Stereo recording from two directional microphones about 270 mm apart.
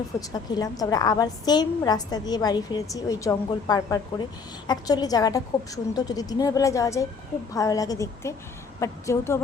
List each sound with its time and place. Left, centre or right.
0.2 s a woman's voice: centre